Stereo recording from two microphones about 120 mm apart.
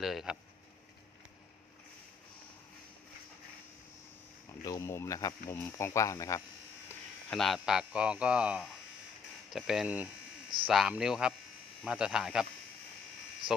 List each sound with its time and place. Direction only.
0.0 s speech: centre (ahead or behind)
4.6 s speech: 30° left (ahead or behind)
7.3 s speech: 5° left (ahead or behind)